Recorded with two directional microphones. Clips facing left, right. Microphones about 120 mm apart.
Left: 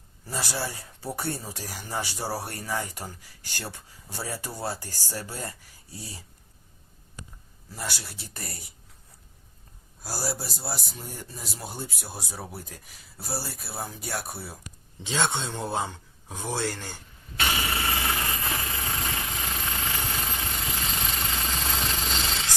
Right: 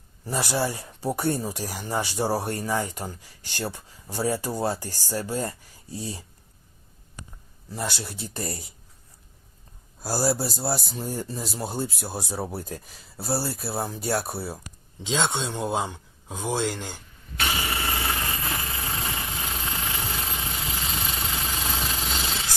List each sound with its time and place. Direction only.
0.7 s speech: 20° right (ahead or behind)
7.7 s speech: 25° right (ahead or behind)
10.0 s speech: 35° right (ahead or behind)
15.0 s speech: 15° right (ahead or behind)
17.3 s vehicle: centre (ahead or behind)